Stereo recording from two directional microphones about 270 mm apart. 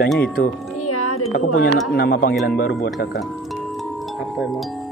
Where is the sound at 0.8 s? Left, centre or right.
Left.